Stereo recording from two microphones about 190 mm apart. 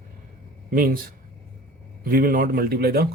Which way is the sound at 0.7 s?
50° right (ahead or behind).